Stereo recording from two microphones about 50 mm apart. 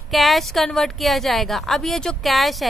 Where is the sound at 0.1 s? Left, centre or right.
Centre.